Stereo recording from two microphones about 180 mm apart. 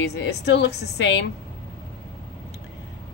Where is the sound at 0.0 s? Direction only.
70° left (ahead or behind).